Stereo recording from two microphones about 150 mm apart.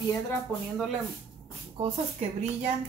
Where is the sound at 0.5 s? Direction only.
10° left (ahead or behind).